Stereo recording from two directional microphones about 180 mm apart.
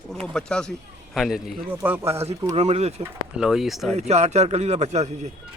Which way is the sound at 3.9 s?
40° right (ahead or behind).